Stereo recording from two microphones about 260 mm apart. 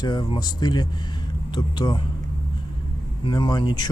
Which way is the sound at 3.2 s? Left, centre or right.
Centre.